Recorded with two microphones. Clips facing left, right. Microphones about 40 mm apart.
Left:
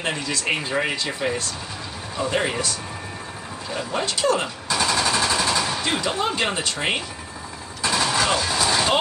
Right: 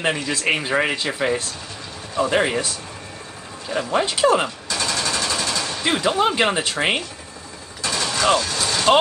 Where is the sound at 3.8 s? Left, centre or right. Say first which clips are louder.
Right 5 dB; centre.